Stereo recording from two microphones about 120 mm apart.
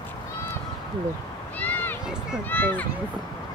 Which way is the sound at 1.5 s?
15° left (ahead or behind).